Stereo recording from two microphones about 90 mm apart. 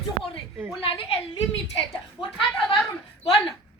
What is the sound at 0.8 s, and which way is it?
Speech, 90° left.